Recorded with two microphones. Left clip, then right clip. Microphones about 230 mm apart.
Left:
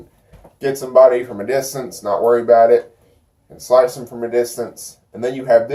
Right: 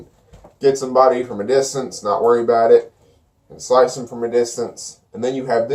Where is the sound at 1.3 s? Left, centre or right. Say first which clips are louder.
Right 3 dB; centre.